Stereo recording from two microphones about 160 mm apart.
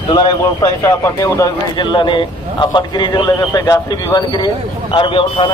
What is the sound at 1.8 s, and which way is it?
A man's voice, 30° left (ahead or behind).